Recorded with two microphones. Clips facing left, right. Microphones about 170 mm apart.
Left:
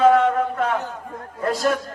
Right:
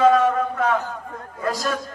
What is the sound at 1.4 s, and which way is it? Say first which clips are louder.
Speech: left 4 dB; 25° left (ahead or behind).